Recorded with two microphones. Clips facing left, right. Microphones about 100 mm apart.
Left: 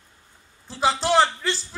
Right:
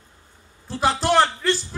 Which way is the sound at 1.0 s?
55° right (ahead or behind).